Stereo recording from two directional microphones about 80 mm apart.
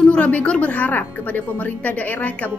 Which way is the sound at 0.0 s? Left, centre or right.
Centre.